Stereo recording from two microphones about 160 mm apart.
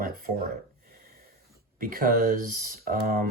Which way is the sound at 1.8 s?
60° right (ahead or behind).